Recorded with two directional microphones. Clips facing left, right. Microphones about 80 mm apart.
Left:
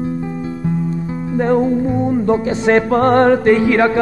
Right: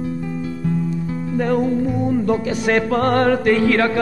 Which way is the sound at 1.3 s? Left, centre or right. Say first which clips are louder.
Left 4 dB; left.